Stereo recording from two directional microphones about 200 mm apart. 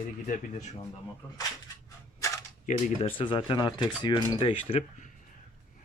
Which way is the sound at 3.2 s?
25° left (ahead or behind).